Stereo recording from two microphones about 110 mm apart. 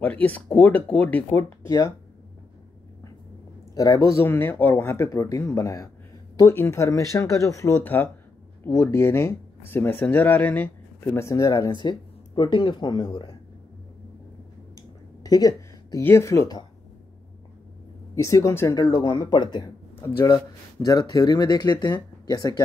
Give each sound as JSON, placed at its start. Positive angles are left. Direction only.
{"t": 0.0, "sound": "speech", "side_deg": 15}
{"t": 1.3, "sound": "speech", "side_deg": 30}
{"t": 3.7, "sound": "speech", "side_deg": 30}
{"t": 11.7, "sound": "speech", "side_deg": 45}
{"t": 15.2, "sound": "a sound", "side_deg": 35}
{"t": 16.0, "sound": "speech", "side_deg": 20}
{"t": 18.1, "sound": "speech", "side_deg": 30}
{"t": 18.7, "sound": "speech", "side_deg": 35}
{"t": 20.8, "sound": "speech", "side_deg": 35}